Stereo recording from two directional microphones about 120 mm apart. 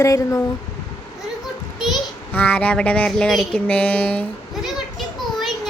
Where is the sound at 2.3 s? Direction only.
15° left (ahead or behind).